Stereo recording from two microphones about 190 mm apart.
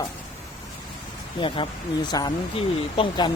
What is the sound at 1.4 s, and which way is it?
Speech, 25° left (ahead or behind).